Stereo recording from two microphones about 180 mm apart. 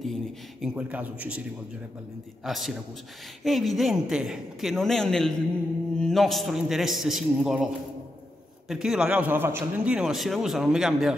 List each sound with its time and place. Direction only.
0.0 s a man's voice: centre (ahead or behind)
2.4 s a man's voice: centre (ahead or behind)